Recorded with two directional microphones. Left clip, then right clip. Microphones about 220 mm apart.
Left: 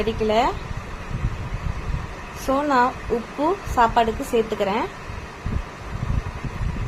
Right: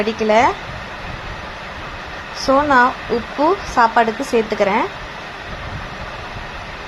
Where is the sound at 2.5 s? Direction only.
20° right (ahead or behind).